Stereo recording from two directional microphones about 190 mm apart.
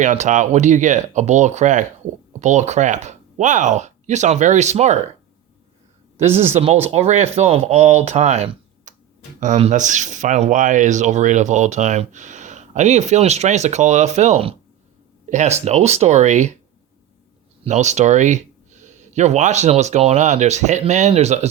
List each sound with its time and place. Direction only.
0.0 s speech: 40° right (ahead or behind)
6.5 s speech: 30° right (ahead or behind)
17.6 s speech: 35° right (ahead or behind)